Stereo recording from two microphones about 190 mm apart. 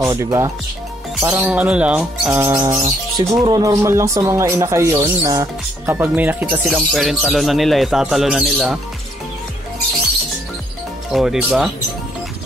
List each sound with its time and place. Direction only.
0.1 s speech: 15° right (ahead or behind)
2.4 s speech: 15° right (ahead or behind)
11.1 s speech: 5° right (ahead or behind)